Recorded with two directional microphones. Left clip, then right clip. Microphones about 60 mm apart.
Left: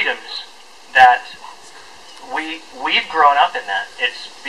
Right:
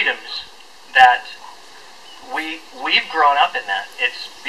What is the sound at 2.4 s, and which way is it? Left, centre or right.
Speech, centre.